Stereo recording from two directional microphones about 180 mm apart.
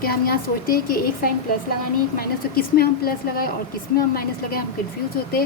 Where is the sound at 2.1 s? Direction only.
55° left (ahead or behind).